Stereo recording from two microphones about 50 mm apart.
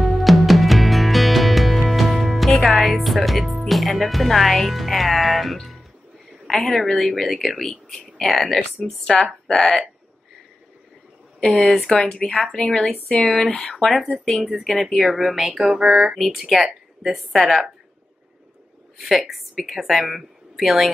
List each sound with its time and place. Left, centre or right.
0.0 s music: centre
2.6 s a woman's voice: centre
11.3 s speech: centre
13.9 s a woman's voice: centre
14.2 s a woman's voice: centre
18.9 s a woman's voice: centre